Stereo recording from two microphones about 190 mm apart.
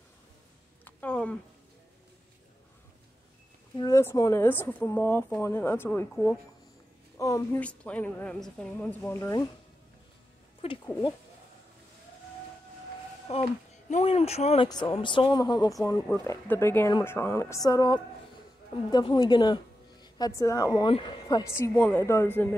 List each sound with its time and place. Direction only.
0.8 s a sound: 5° left (ahead or behind)
3.7 s speech: 20° left (ahead or behind)
10.6 s speech: 30° left (ahead or behind)
13.3 s speech: 35° left (ahead or behind)
14.7 s speech: 20° left (ahead or behind)
16.1 s speech: 10° left (ahead or behind)